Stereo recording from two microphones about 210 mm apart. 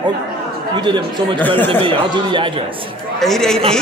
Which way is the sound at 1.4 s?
10° left (ahead or behind).